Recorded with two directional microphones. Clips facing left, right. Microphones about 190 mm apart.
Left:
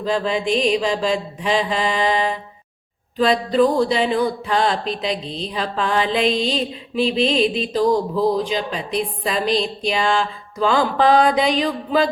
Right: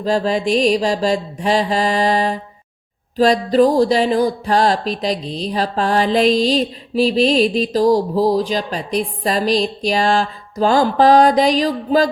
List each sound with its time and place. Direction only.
0.0 s speech: 40° right (ahead or behind)